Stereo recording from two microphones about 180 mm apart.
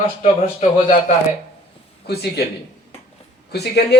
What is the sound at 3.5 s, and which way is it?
Speech, 65° left (ahead or behind).